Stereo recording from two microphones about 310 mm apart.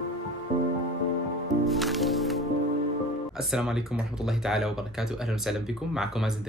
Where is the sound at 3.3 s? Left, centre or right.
Centre.